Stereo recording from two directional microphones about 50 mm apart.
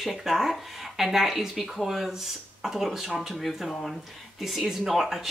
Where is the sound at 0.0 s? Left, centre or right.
Centre.